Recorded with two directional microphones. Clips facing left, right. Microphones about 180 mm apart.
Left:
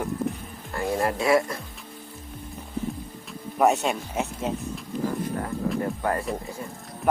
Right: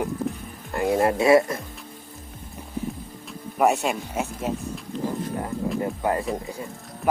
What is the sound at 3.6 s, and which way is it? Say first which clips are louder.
Speech: even; 5° right (ahead or behind).